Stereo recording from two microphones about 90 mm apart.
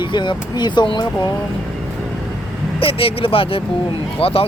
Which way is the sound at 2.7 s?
90° left.